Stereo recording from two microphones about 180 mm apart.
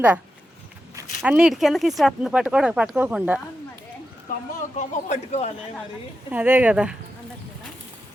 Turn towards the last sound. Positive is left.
turn(degrees=-5)  # may be behind; listen again after turning